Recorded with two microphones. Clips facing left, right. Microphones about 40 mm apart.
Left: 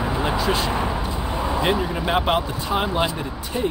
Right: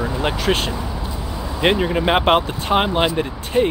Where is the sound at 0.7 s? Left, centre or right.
Left.